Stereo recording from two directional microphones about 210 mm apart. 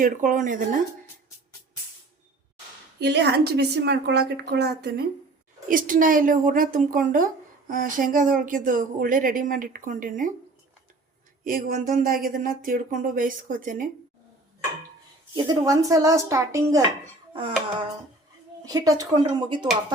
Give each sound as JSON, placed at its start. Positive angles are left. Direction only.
{"t": 0.0, "sound": "speech", "side_deg": -40}
{"t": 3.0, "sound": "a woman's voice", "side_deg": -50}
{"t": 5.6, "sound": "speech", "side_deg": -40}
{"t": 11.4, "sound": "speech", "side_deg": -40}
{"t": 15.4, "sound": "speech", "side_deg": -15}
{"t": 18.6, "sound": "speech", "side_deg": -15}